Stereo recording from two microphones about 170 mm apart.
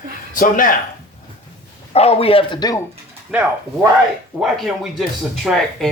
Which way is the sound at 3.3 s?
5° right (ahead or behind).